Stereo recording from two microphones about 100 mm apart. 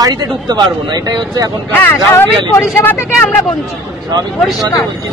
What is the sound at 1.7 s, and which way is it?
Speech, 20° left (ahead or behind).